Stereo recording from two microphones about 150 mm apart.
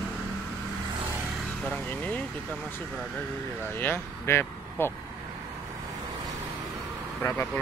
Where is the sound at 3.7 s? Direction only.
15° left (ahead or behind).